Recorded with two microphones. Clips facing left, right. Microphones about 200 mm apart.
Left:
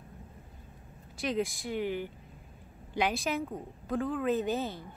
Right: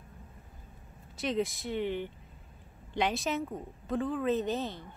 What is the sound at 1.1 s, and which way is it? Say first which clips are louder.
A woman's voice: even; centre (ahead or behind).